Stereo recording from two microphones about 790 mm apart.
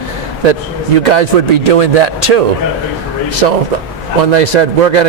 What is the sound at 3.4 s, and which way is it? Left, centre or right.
A man's voice, right.